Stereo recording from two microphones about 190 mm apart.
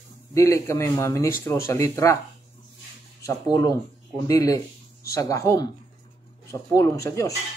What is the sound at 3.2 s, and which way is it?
Speech, 15° left (ahead or behind).